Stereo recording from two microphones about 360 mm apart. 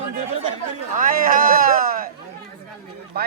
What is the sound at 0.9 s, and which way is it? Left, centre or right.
Speech, right.